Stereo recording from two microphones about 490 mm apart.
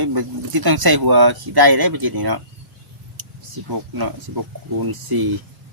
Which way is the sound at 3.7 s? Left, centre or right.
Right.